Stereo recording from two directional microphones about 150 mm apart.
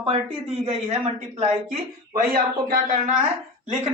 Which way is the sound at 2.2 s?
80° right.